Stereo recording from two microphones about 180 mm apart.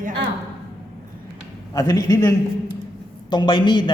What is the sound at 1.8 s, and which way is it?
Speech, 20° left (ahead or behind).